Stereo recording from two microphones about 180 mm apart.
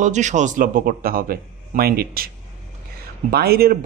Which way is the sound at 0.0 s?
40° right (ahead or behind).